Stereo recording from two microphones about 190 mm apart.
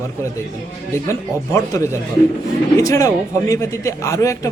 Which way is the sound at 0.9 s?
15° left (ahead or behind).